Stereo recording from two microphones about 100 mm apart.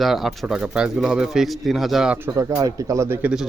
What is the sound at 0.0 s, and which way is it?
Speech, centre (ahead or behind).